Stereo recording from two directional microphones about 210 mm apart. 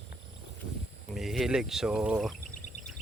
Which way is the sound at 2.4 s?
35° left (ahead or behind).